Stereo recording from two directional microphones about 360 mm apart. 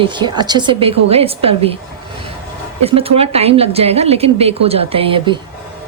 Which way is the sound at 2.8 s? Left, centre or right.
Centre.